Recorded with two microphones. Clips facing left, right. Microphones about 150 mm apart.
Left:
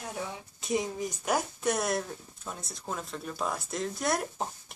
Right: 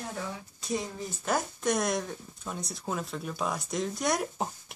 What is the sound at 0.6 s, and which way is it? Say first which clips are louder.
Speech: left 4 dB; 20° left (ahead or behind).